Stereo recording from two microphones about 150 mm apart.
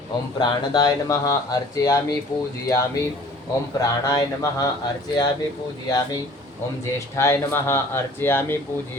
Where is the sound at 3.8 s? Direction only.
25° left (ahead or behind).